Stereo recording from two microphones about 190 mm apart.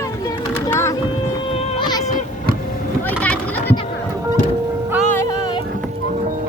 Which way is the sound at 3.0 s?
10° left (ahead or behind).